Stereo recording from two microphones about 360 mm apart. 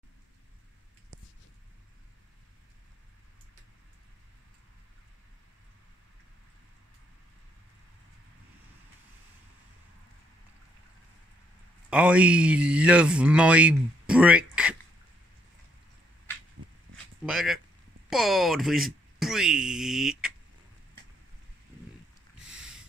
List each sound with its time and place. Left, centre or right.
11.9 s speech: centre
17.3 s speech: centre
22.5 s a sound: centre